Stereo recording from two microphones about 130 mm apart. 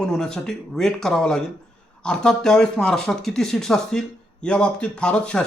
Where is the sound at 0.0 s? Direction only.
5° left (ahead or behind).